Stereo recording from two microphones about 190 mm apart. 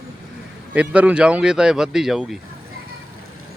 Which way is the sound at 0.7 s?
5° right (ahead or behind).